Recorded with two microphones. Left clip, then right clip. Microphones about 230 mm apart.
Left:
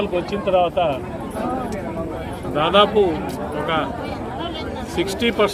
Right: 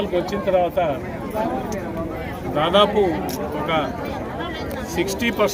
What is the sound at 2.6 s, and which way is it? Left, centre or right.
Speech, centre.